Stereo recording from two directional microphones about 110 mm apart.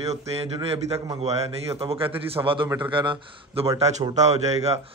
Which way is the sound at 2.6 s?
15° right (ahead or behind).